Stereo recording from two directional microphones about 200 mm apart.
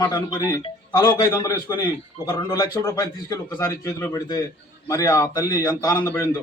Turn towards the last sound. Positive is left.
turn(degrees=15)  # may be behind; listen again after turning